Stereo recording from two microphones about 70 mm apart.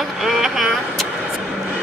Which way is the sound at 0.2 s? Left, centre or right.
Centre.